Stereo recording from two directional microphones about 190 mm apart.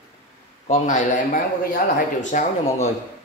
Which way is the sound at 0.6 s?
40° left (ahead or behind).